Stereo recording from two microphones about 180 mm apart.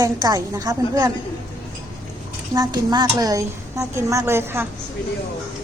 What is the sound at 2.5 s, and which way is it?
A woman's voice, 20° right (ahead or behind).